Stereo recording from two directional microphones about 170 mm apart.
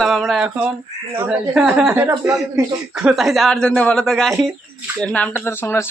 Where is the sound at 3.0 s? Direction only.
Centre (ahead or behind).